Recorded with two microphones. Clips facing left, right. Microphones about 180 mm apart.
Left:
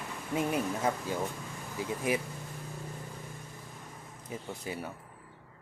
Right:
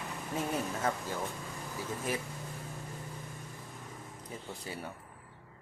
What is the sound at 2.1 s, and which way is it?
Speech, 15° left (ahead or behind).